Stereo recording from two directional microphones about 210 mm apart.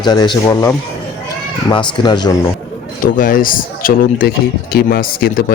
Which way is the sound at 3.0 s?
40° left (ahead or behind).